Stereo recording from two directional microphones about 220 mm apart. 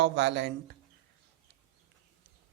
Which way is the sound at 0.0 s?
50° right (ahead or behind).